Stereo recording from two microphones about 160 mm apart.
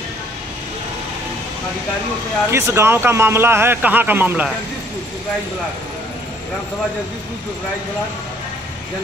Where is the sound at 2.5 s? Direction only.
15° right (ahead or behind).